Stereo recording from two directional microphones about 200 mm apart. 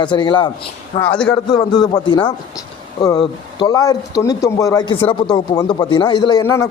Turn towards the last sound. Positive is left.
turn(degrees=15)  # may be behind; listen again after turning